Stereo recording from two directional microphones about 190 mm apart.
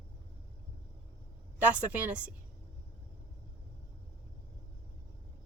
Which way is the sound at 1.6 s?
10° right (ahead or behind).